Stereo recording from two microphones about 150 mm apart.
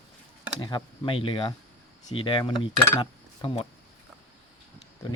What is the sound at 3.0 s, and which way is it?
Cutlery, 35° left (ahead or behind).